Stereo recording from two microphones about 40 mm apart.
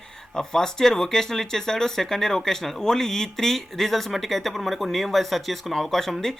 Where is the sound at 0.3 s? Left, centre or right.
Centre.